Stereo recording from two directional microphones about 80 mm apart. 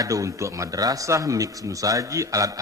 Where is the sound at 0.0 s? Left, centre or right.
Right.